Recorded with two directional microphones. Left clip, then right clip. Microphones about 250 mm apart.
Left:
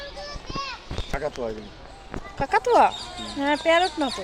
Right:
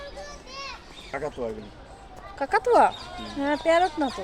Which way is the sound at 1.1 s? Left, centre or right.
Left.